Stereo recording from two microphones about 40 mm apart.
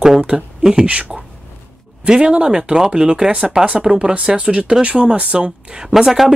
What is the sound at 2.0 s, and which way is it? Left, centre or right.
Speech, centre.